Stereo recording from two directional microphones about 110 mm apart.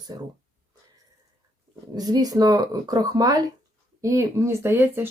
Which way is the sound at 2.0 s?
35° right (ahead or behind).